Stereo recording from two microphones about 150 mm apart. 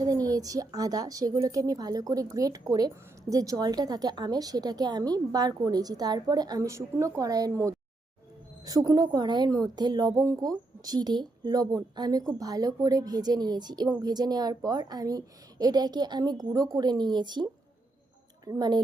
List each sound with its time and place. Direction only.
0.0 s a woman's voice: 25° right (ahead or behind)
18.4 s a woman's voice: 25° right (ahead or behind)